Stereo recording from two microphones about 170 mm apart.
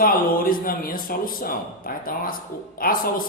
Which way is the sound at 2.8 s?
60° left (ahead or behind).